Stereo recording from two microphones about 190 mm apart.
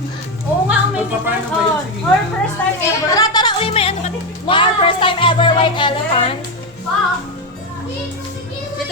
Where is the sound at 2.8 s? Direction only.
20° left (ahead or behind).